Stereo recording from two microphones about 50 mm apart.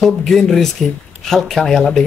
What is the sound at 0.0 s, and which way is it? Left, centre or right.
Speech, centre.